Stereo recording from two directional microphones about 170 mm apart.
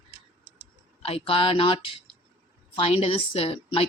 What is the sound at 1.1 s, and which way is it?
Speech, 35° left (ahead or behind).